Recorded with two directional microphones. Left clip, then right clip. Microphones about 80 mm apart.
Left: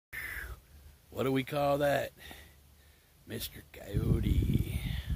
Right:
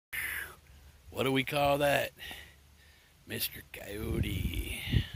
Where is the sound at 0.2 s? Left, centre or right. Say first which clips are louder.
Right 3 dB; centre.